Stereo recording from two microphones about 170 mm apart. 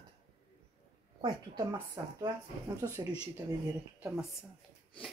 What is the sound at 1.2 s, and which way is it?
A woman's voice, 25° right (ahead or behind).